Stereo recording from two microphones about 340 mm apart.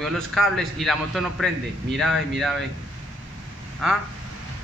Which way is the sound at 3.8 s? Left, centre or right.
Centre.